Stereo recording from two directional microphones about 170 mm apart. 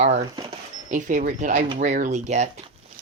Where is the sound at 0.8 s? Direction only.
50° right (ahead or behind).